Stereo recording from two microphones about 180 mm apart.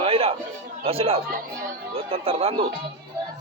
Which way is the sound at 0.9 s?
30° right (ahead or behind).